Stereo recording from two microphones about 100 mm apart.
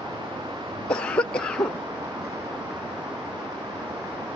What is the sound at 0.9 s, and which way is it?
Cough, 10° left (ahead or behind).